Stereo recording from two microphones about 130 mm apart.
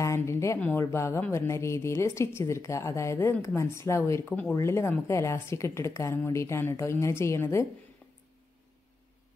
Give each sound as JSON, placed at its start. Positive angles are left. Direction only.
{"t": 0.0, "sound": "a sound", "side_deg": 20}
{"t": 0.6, "sound": "a woman's voice", "side_deg": 20}
{"t": 4.3, "sound": "speech", "side_deg": 10}
{"t": 4.6, "sound": "a woman's voice", "side_deg": 20}